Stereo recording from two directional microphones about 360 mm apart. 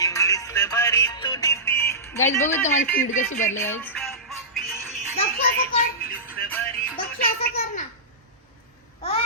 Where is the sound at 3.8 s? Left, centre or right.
Centre.